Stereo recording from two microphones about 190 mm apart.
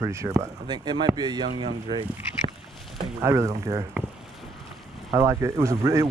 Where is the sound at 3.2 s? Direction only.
15° right (ahead or behind).